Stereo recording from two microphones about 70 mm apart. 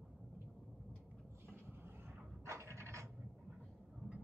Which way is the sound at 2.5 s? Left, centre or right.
Right.